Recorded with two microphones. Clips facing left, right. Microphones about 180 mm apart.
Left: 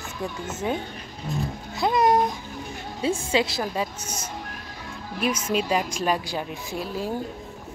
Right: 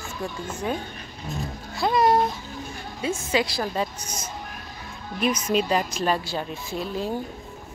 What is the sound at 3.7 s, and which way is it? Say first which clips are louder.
A woman's voice: right 1 dB; 10° left (ahead or behind).